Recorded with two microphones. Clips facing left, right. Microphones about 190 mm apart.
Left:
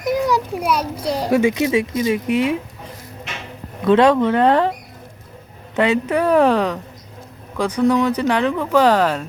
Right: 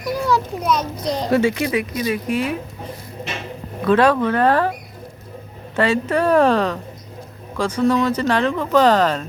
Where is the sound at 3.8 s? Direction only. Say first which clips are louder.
Left 2 dB; 20° left (ahead or behind).